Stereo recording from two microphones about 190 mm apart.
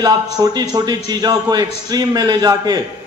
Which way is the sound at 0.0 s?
20° right (ahead or behind).